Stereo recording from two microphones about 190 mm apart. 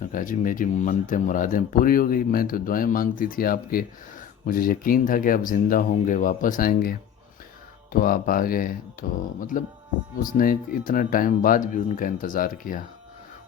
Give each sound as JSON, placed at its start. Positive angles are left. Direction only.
{"t": 0.0, "sound": "speech", "side_deg": 45}
{"t": 7.9, "sound": "speech", "side_deg": 50}